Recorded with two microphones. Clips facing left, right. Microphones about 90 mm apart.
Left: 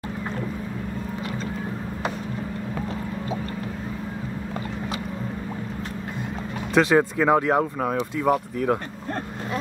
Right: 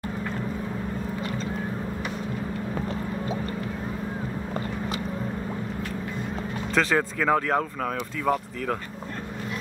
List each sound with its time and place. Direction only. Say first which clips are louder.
6.7 s speech: left 5 dB; 15° left (ahead or behind)